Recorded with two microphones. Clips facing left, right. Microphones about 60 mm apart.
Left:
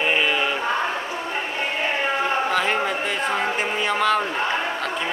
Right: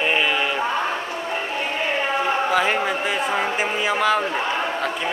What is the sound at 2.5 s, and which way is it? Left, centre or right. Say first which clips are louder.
A man's voice: right 2 dB; centre.